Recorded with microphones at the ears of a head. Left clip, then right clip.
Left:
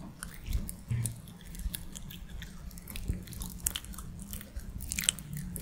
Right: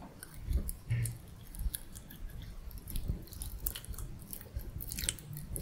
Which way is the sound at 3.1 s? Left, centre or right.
Left.